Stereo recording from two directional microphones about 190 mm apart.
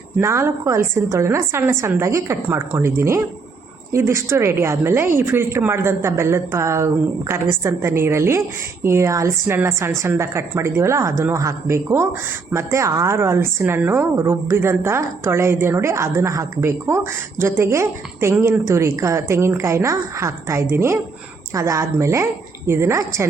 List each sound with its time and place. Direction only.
0.2 s a woman's voice: 15° right (ahead or behind)